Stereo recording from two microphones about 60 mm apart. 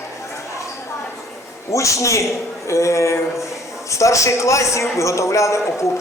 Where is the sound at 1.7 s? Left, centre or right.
Left.